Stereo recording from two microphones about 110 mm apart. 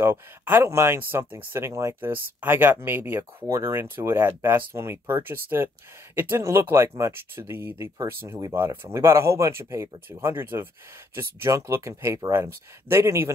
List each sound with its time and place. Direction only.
0.0 s speech: 25° right (ahead or behind)